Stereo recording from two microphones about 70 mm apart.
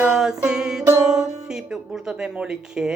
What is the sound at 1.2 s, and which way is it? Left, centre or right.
Speech, centre.